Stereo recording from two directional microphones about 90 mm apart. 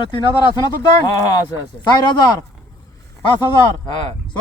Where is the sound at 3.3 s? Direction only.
50° left (ahead or behind).